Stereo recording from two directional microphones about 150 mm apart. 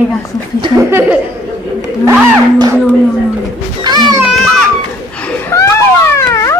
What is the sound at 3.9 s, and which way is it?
Music, 30° right (ahead or behind).